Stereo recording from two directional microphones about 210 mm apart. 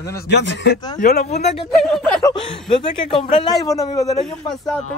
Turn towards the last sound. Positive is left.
turn(degrees=0)  # may be behind; listen again after turning